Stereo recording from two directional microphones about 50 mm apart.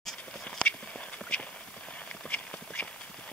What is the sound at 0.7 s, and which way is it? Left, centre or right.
Clip-clop, left.